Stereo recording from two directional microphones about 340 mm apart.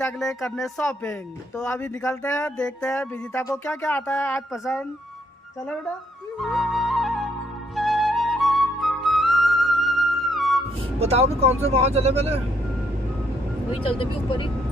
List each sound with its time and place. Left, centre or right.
0.0 s speech: centre
6.4 s flute: centre
11.0 s speech: centre
13.9 s speech: centre